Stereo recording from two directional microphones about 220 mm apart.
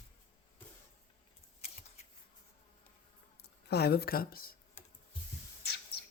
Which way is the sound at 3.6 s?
45° left (ahead or behind).